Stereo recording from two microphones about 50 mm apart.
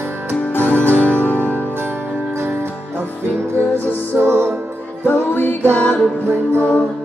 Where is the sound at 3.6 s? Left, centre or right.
Left.